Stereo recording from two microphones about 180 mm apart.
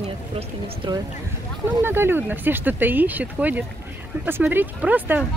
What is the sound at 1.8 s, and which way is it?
A woman's voice, 10° right (ahead or behind).